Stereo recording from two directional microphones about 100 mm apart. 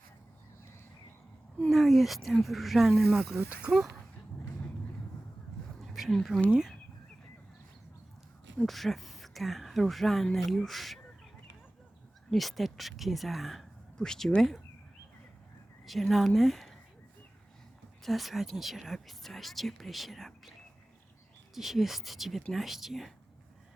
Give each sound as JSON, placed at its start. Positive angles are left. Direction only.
{"t": 1.7, "sound": "speech", "side_deg": 0}
{"t": 5.9, "sound": "speech", "side_deg": 0}
{"t": 8.5, "sound": "speech", "side_deg": 0}
{"t": 12.3, "sound": "speech", "side_deg": 0}
{"t": 15.9, "sound": "speech", "side_deg": 0}
{"t": 18.0, "sound": "speech", "side_deg": 0}
{"t": 21.5, "sound": "speech", "side_deg": 0}